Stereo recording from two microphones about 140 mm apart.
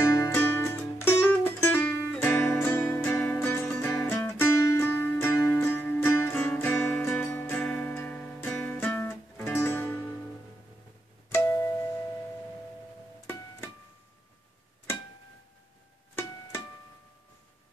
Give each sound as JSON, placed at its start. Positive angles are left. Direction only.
{"t": 0.2, "sound": "music", "side_deg": 15}
{"t": 11.2, "sound": "music", "side_deg": 20}